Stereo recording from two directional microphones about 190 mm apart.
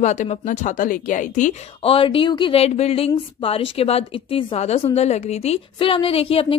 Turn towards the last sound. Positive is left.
turn(degrees=30)  # may be behind; listen again after turning